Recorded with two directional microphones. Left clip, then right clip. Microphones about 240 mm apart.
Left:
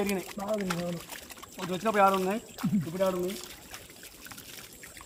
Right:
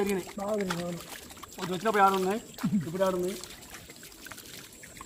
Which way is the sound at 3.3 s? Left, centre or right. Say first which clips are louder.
Even; left.